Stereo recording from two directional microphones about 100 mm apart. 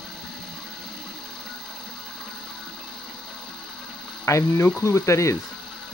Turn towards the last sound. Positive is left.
turn(degrees=30)  # may be behind; listen again after turning